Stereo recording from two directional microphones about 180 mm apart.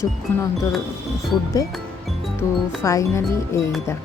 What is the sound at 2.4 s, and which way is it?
Speech, 15° left (ahead or behind).